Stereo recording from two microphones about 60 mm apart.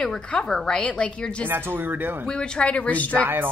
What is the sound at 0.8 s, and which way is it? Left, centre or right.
Speech, left.